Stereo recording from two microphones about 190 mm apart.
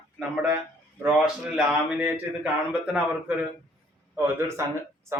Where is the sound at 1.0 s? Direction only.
5° right (ahead or behind).